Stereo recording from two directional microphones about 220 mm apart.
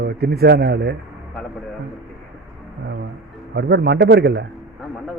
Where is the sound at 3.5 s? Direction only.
50° right (ahead or behind).